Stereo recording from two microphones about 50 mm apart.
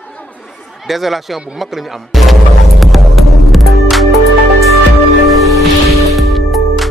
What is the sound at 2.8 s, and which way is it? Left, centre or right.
Music, centre.